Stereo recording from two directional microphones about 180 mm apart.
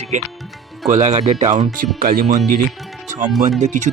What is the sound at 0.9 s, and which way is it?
Speech, 40° right (ahead or behind).